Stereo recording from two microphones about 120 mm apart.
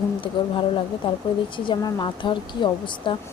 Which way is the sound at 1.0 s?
50° left (ahead or behind).